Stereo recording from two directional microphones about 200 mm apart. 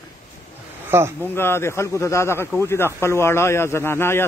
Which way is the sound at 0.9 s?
10° right (ahead or behind).